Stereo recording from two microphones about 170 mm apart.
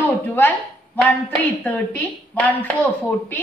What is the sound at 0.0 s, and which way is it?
Speech, 10° left (ahead or behind).